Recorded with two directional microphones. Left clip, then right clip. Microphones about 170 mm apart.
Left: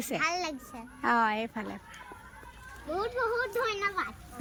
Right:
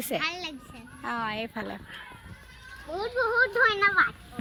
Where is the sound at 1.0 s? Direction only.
25° left (ahead or behind).